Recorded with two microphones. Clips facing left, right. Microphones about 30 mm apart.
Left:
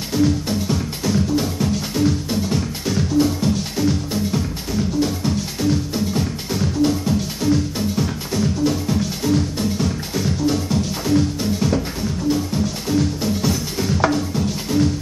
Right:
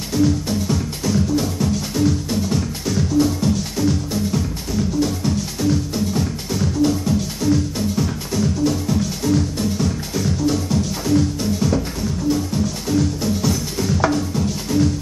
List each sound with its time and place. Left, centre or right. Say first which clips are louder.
0.1 s music: even; centre
12.9 s music: even; centre